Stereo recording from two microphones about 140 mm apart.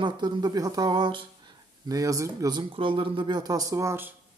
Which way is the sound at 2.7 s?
40° right (ahead or behind).